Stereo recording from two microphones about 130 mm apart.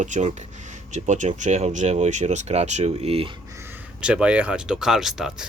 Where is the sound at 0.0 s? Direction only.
65° right (ahead or behind); by 3.3 s 50° right (ahead or behind).